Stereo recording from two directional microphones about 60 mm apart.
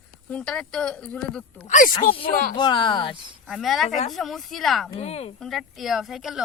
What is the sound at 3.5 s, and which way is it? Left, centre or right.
Speech, centre.